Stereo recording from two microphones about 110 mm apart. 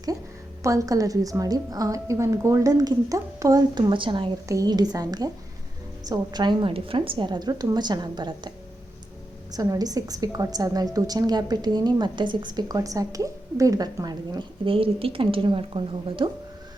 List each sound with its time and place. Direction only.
0.6 s a woman's voice: 30° right (ahead or behind); by 4.3 s 50° right (ahead or behind)
4.4 s a woman's voice: 35° right (ahead or behind); by 16.3 s 50° right (ahead or behind)